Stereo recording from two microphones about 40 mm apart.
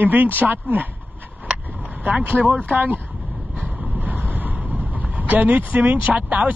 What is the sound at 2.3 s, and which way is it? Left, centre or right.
Speech, right.